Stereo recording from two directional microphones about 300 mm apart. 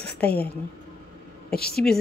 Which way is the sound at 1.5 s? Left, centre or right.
Left.